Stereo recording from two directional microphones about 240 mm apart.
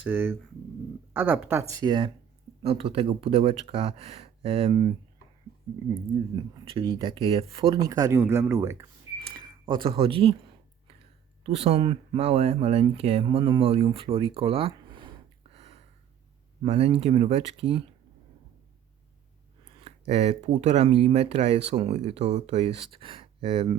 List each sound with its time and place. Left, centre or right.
0.0 s speech: centre
5.9 s speech: centre
9.2 s cash register: centre
11.4 s speech: right
19.8 s speech: right